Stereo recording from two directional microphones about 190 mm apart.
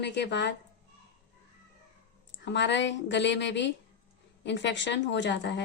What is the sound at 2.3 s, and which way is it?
Speech, 65° left (ahead or behind).